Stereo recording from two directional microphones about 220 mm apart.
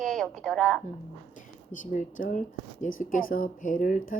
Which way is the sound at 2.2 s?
35° left (ahead or behind).